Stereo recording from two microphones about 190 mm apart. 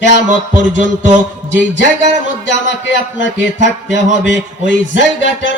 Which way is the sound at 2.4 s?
70° left (ahead or behind).